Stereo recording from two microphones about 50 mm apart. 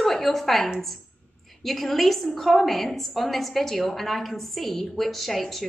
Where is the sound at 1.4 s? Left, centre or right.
Centre.